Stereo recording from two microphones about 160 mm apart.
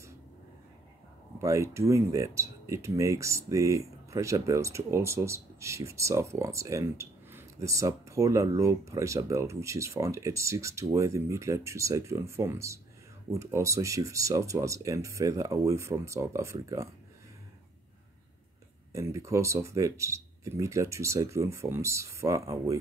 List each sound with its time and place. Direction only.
1.4 s speech: 20° right (ahead or behind)
18.9 s speech: 20° right (ahead or behind)